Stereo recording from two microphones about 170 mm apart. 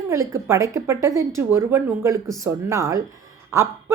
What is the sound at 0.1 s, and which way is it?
A woman's voice, 15° right (ahead or behind).